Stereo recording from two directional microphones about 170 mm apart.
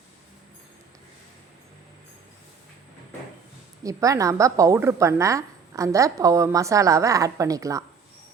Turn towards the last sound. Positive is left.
turn(degrees=-20)  # may be behind; listen again after turning